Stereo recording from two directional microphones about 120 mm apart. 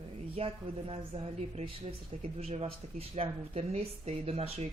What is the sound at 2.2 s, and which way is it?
Speech, 65° right (ahead or behind).